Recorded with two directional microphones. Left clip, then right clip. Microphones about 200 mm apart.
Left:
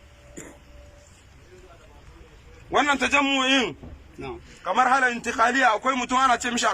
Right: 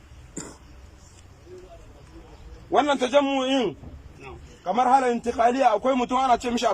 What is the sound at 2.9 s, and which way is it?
Speech, 30° right (ahead or behind).